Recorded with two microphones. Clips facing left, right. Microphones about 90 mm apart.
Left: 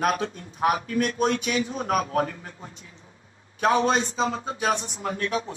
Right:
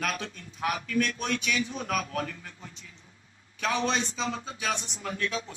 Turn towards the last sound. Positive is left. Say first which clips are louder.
# left 5 dB
turn(degrees=35)  # may be behind; listen again after turning